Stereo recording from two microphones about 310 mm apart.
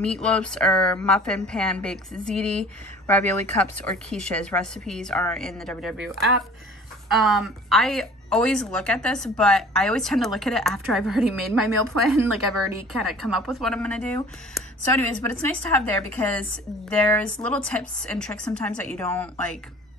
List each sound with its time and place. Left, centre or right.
0.0 s a woman's voice: centre